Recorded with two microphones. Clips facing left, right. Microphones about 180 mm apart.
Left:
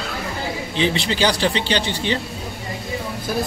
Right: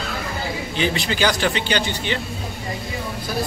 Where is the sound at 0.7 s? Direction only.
25° left (ahead or behind).